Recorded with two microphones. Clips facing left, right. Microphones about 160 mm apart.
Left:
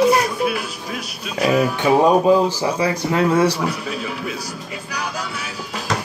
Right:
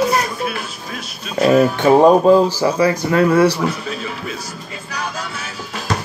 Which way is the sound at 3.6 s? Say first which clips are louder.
Right 2 dB; 10° left (ahead or behind).